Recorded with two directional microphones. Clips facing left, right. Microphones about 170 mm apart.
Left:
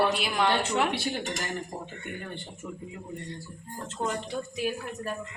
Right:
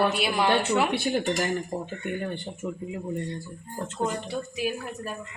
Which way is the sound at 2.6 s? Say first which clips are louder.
Right 7 dB; 20° right (ahead or behind).